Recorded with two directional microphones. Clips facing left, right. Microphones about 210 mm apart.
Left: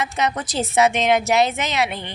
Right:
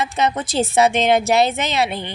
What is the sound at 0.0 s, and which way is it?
Speech, 30° right (ahead or behind).